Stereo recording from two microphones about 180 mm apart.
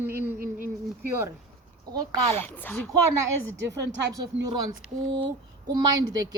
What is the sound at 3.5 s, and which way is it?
Speech, 80° right.